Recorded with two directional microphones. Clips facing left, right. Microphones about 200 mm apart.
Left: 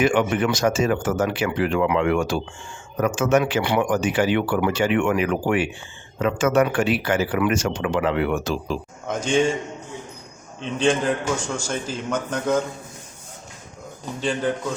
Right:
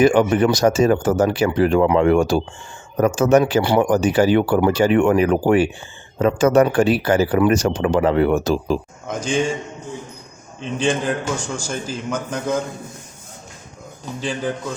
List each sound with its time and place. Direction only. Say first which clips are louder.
0.0 s speech: right 5 dB; 35° right (ahead or behind)
9.0 s a man's voice: left 1 dB; centre (ahead or behind)
10.6 s a man's voice: even; 5° right (ahead or behind)
14.2 s a man's voice: left 1 dB; 5° right (ahead or behind)